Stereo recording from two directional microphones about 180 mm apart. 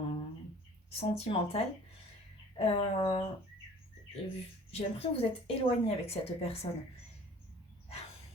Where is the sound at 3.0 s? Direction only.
30° left (ahead or behind).